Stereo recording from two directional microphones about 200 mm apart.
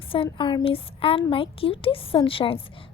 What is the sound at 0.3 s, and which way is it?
A woman's voice, 25° left (ahead or behind).